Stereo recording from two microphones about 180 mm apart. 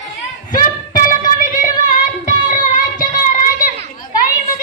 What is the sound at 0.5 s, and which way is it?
Music, 50° left (ahead or behind).